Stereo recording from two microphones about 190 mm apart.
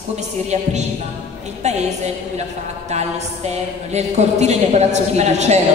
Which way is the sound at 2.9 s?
35° right (ahead or behind).